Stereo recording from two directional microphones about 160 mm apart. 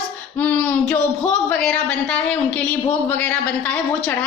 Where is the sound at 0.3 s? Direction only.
10° left (ahead or behind).